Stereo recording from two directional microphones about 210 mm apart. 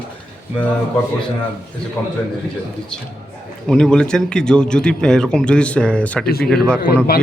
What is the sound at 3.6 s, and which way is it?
Speech, 5° left (ahead or behind).